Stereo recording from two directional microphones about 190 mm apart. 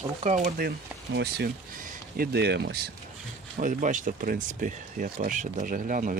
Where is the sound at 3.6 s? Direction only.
45° right (ahead or behind).